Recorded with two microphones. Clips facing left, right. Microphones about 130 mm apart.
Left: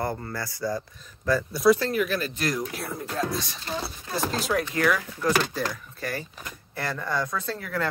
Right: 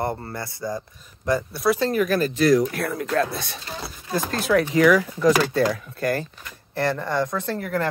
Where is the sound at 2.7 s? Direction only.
80° right; by 3.5 s 60° right (ahead or behind).